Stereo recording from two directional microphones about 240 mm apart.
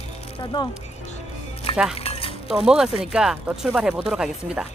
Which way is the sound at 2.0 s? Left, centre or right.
Left.